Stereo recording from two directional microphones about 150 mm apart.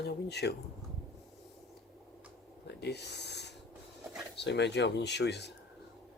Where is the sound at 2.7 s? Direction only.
90° left.